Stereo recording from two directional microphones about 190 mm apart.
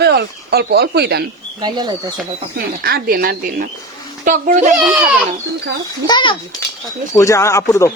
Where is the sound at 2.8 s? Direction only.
50° right (ahead or behind).